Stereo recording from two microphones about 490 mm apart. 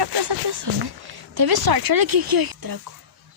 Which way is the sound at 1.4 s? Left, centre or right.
Right.